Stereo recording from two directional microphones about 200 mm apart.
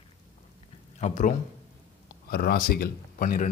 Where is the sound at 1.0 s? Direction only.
40° left (ahead or behind).